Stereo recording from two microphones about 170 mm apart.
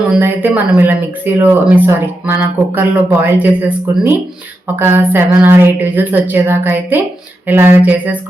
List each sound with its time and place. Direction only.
0.1 s speech: 10° right (ahead or behind)